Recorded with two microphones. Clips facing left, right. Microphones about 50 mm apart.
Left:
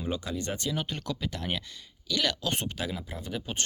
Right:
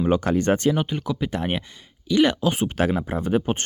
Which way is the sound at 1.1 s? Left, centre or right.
Right.